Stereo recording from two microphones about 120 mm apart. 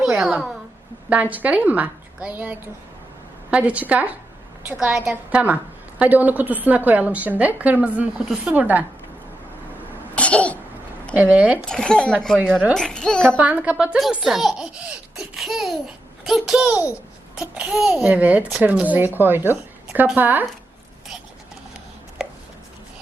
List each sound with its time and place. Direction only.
0.0 s a woman's voice: 5° right (ahead or behind)
10.2 s cough: 10° left (ahead or behind)
11.1 s a woman's voice: 15° right (ahead or behind)
11.7 s a child's voice: 5° left (ahead or behind)
13.4 s a child's voice: 10° right (ahead or behind)